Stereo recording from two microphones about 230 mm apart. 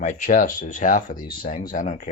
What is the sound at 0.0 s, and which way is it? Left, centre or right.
Speech, left.